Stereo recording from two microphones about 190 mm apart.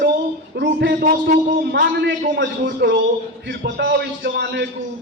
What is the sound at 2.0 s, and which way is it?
A woman's voice, 60° right (ahead or behind).